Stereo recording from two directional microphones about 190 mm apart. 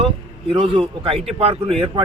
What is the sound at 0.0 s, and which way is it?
A man's voice, 30° right (ahead or behind).